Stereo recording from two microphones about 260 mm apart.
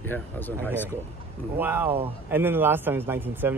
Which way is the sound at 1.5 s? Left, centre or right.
Centre.